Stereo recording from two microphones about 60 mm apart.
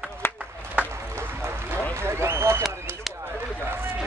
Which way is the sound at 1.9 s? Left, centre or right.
Right.